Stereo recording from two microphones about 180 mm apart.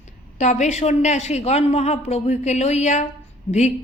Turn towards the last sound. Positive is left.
turn(degrees=40)  # may be behind; listen again after turning